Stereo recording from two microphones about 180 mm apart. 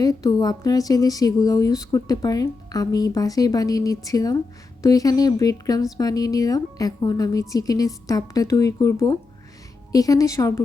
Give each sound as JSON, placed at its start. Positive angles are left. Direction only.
{"t": 0.0, "sound": "a woman's voice", "side_deg": 20}